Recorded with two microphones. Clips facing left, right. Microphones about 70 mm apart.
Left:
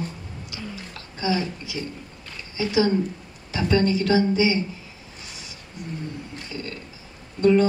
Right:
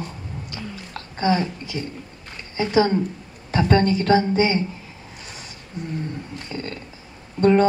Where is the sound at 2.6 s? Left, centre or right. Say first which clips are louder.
Right 2 dB; right.